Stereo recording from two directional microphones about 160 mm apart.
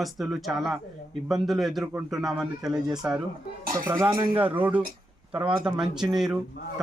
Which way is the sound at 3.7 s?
15° right (ahead or behind).